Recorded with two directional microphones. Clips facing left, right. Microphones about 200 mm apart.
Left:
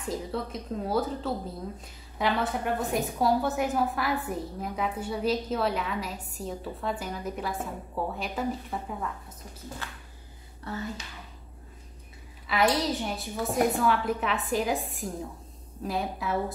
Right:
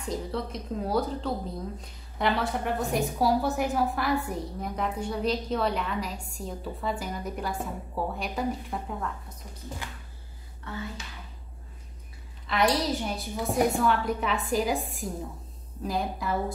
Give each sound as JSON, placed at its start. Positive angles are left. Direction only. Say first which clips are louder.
{"t": 0.0, "sound": "a woman's voice", "louder": "even", "side_deg": 0}
{"t": 9.8, "sound": "a sound", "louder": "right 1 dB", "side_deg": -15}
{"t": 10.7, "sound": "speech", "louder": "left 2 dB", "side_deg": 35}
{"t": 12.4, "sound": "a woman's voice", "louder": "even", "side_deg": 0}